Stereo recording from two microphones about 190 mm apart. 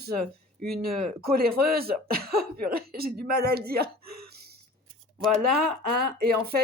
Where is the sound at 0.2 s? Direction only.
5° left (ahead or behind).